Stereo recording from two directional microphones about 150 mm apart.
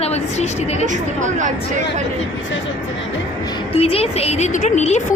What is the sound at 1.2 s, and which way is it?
Speech, 55° right (ahead or behind).